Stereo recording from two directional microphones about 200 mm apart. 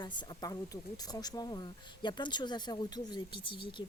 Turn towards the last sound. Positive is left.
turn(degrees=25)  # may be behind; listen again after turning